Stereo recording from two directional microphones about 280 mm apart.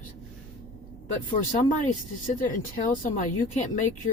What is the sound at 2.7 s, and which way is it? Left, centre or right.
Speech, left.